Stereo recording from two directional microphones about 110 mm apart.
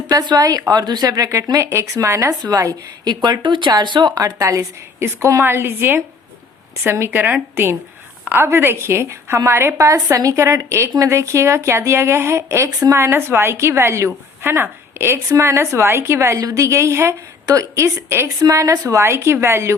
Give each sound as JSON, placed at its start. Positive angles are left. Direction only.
{"t": 0.1, "sound": "a woman's voice", "side_deg": -35}